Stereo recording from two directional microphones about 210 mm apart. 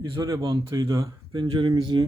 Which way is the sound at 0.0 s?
20° right (ahead or behind).